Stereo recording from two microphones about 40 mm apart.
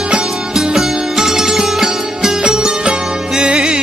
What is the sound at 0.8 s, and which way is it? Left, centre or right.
Sitar, centre.